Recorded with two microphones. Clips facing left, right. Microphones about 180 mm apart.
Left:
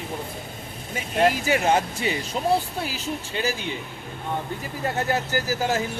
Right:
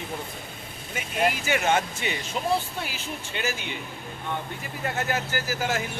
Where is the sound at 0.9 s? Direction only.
35° left (ahead or behind).